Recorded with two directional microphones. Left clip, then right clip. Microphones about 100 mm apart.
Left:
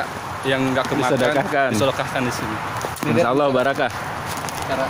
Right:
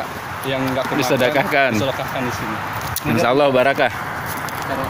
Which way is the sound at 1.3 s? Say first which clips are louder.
Right 3 dB; 10° right (ahead or behind).